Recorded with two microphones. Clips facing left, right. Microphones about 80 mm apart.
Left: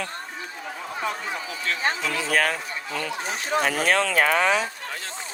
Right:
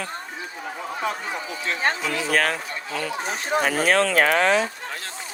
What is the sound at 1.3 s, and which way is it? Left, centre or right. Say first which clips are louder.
Speech: right 1 dB; right.